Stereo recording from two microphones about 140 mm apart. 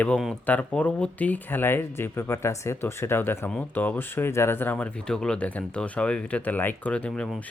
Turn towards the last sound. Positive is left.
turn(degrees=0)  # may be behind; listen again after turning